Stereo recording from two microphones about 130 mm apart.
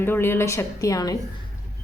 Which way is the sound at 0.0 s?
15° left (ahead or behind).